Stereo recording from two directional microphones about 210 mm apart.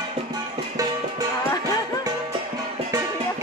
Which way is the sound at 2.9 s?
15° right (ahead or behind).